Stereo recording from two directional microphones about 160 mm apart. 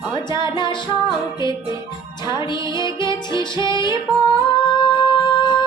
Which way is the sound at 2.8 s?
30° left (ahead or behind).